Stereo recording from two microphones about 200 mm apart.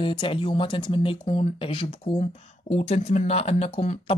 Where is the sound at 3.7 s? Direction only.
35° left (ahead or behind).